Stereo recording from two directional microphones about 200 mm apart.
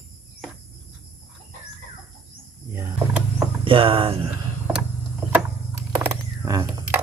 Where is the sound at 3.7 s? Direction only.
25° right (ahead or behind).